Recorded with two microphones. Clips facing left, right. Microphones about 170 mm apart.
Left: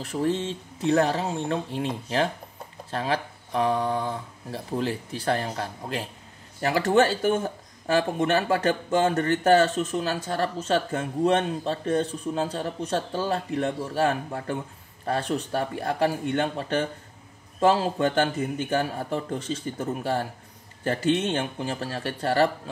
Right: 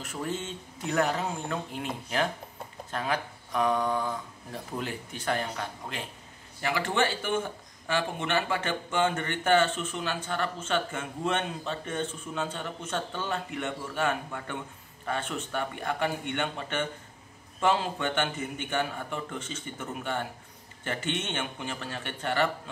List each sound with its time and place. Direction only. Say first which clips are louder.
0.0 s speech: left 8 dB; 35° left (ahead or behind)
2.9 s speech: left 4 dB; 30° left (ahead or behind)